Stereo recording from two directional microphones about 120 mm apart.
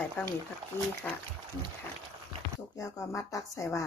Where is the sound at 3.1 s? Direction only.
25° left (ahead or behind).